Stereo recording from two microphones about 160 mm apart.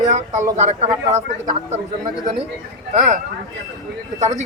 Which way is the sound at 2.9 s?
45° right (ahead or behind).